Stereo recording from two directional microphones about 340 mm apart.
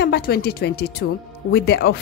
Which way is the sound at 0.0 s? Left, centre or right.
Left.